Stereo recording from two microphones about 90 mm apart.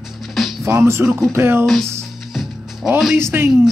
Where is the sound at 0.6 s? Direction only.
30° right (ahead or behind).